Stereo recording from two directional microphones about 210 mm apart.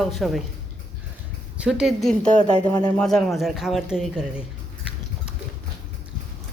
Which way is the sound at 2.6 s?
20° left (ahead or behind).